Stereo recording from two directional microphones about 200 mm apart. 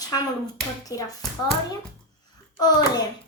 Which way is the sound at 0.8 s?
20° left (ahead or behind).